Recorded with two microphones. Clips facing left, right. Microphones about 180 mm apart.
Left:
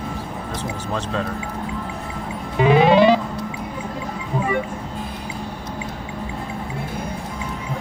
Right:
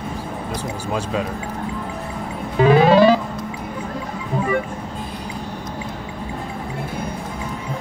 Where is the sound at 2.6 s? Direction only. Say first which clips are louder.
Right 1 dB; 20° left (ahead or behind).